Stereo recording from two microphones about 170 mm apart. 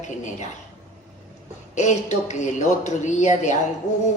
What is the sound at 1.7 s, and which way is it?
A woman's voice, 45° left (ahead or behind).